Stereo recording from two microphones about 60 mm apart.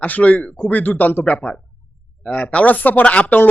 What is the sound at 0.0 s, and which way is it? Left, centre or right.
Speech, left.